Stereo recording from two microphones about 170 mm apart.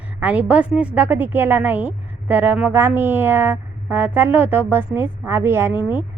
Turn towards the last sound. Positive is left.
turn(degrees=-15)  # may be behind; listen again after turning